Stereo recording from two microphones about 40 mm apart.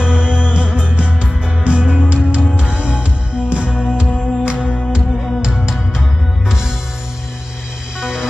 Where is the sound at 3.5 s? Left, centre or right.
Right.